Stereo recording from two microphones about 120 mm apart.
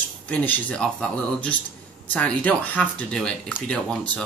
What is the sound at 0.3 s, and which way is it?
Speech, 10° left (ahead or behind).